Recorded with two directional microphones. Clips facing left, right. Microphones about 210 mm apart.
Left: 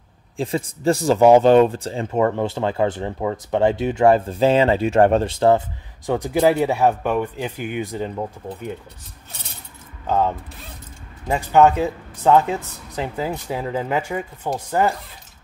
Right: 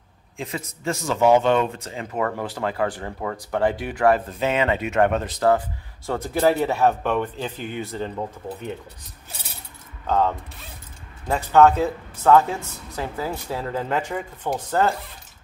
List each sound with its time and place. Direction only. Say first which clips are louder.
0.4 s speech: left 8 dB; 30° left (ahead or behind)
6.0 s speech: left 3 dB; 15° left (ahead or behind)
10.0 s speech: left 1 dB; 10° left (ahead or behind)